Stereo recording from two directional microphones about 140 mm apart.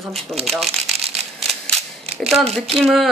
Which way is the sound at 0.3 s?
20° right (ahead or behind).